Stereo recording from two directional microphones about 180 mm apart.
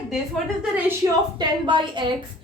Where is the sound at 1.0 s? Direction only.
20° right (ahead or behind).